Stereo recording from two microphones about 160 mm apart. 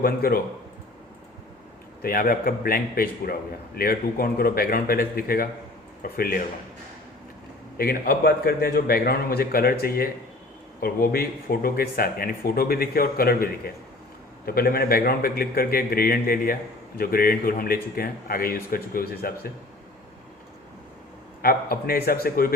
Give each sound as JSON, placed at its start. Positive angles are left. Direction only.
{"t": 0.0, "sound": "speech", "side_deg": 65}
{"t": 2.0, "sound": "a man's voice", "side_deg": 65}
{"t": 7.8, "sound": "speech", "side_deg": 70}
{"t": 21.4, "sound": "speech", "side_deg": 65}